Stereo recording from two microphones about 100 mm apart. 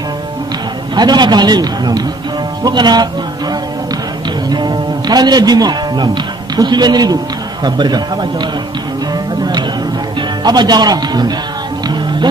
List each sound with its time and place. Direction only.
0.9 s a man's voice: 45° right (ahead or behind)
4.5 s a man's voice: 45° right (ahead or behind)
9.4 s music: 45° right (ahead or behind)
10.4 s a man's voice: 45° right (ahead or behind)
11.9 s music: 50° right (ahead or behind)